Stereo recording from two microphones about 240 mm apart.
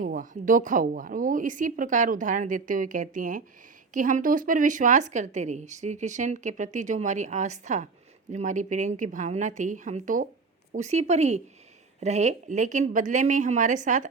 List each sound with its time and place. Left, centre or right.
0.0 s a woman's voice: right